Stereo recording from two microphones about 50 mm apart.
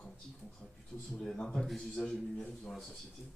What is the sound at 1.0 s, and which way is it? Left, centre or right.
Speech, centre.